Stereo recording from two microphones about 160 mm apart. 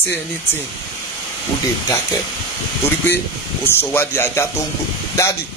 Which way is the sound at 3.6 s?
15° left (ahead or behind).